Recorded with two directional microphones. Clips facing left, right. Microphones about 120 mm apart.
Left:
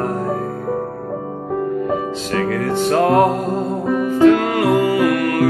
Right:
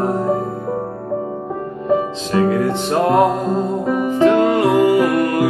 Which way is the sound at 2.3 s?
20° right (ahead or behind).